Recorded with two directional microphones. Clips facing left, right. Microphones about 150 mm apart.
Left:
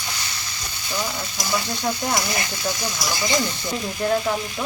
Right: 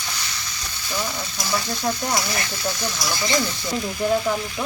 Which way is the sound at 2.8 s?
15° left (ahead or behind).